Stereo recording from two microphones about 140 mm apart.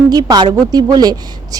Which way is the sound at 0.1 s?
30° right (ahead or behind).